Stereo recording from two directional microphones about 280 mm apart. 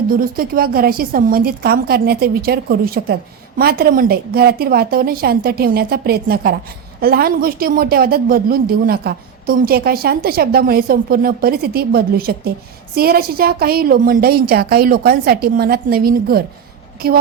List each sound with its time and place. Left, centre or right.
0.1 s a woman's voice: right